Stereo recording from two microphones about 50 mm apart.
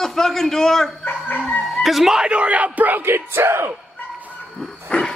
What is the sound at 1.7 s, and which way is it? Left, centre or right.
Speech, centre.